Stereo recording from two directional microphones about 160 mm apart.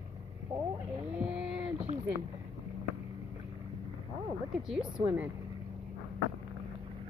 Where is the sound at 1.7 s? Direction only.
40° right (ahead or behind).